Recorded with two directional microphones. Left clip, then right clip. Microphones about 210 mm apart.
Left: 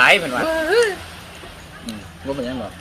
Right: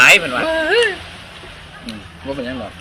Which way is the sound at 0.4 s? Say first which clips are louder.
Right 2 dB; 15° left (ahead or behind).